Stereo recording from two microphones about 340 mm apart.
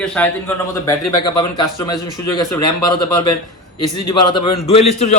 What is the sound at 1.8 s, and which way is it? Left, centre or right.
Speech, centre.